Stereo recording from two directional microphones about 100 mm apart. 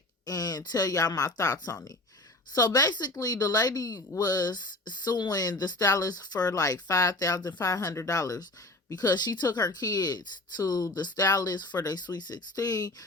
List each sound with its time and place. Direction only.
0.3 s speech: 40° left (ahead or behind)